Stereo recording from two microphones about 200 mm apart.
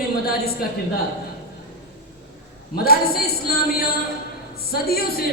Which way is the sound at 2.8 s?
50° left (ahead or behind).